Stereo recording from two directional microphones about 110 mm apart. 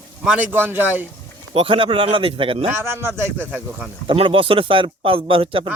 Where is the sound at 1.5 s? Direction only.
55° right (ahead or behind).